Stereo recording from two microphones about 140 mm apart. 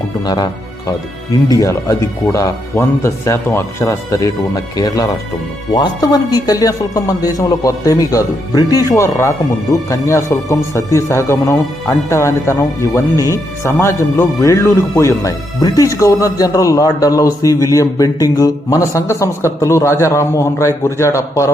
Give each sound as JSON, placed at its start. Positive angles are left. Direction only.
{"t": 1.5, "sound": "speech", "side_deg": 25}